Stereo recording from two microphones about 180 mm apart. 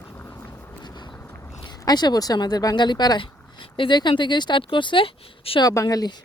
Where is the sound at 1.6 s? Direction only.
20° left (ahead or behind).